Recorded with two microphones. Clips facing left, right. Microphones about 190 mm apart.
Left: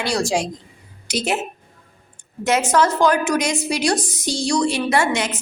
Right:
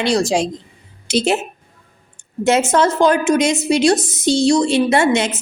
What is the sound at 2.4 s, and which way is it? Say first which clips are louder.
A woman's voice: right 3 dB; 25° right (ahead or behind).